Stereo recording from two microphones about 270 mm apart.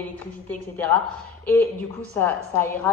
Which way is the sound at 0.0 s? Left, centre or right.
Centre.